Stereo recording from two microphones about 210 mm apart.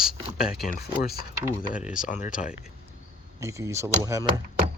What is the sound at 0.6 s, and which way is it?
Speech, 45° left (ahead or behind).